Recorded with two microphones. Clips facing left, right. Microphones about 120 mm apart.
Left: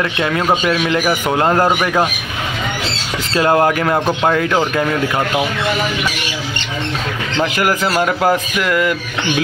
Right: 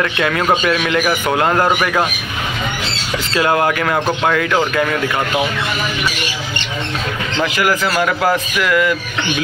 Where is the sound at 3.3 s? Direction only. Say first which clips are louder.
Left 2 dB; 35° left (ahead or behind).